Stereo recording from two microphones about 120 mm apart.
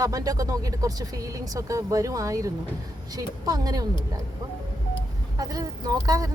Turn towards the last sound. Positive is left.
turn(degrees=-30)  # may be behind; listen again after turning